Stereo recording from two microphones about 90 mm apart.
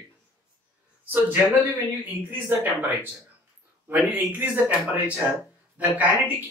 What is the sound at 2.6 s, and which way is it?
A man's voice, 20° right (ahead or behind).